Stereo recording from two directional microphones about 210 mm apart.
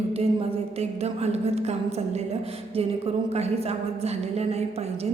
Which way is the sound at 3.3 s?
30° right (ahead or behind).